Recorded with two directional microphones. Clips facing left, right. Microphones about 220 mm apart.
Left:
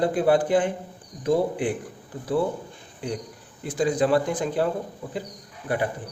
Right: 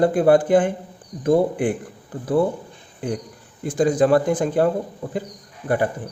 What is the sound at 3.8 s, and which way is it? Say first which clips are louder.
Speech: right 5 dB; 45° right (ahead or behind).